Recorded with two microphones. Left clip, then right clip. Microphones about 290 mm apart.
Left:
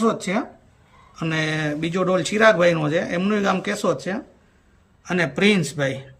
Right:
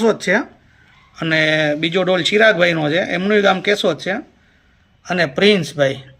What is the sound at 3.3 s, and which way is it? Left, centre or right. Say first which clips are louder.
Speech: right 10 dB; left.